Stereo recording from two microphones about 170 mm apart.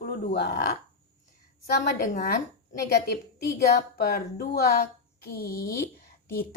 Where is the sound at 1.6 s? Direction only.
50° left (ahead or behind).